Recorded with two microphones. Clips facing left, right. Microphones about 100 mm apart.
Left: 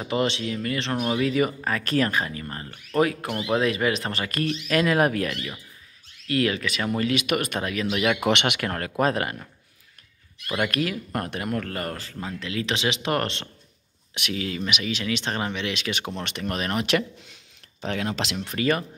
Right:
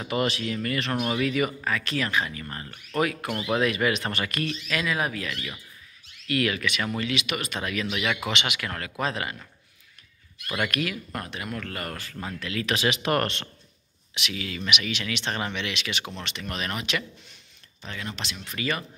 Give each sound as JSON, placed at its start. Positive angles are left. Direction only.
{"t": 0.1, "sound": "speech", "side_deg": 25}
{"t": 2.4, "sound": "speech", "side_deg": 30}
{"t": 4.6, "sound": "speech", "side_deg": 45}
{"t": 6.2, "sound": "speech", "side_deg": 30}
{"t": 7.0, "sound": "speech", "side_deg": 45}
{"t": 7.6, "sound": "speech", "side_deg": 35}
{"t": 8.3, "sound": "speech", "side_deg": 60}
{"t": 8.5, "sound": "speech", "side_deg": 40}
{"t": 10.7, "sound": "speech", "side_deg": 35}
{"t": 11.1, "sound": "speech", "side_deg": 50}
{"t": 17.8, "sound": "speech", "side_deg": 85}
{"t": 18.4, "sound": "speech", "side_deg": 40}